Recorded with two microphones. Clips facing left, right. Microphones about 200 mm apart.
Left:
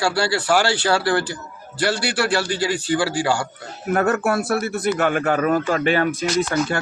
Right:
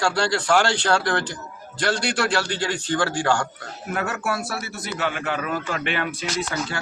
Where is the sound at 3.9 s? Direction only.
50° left (ahead or behind).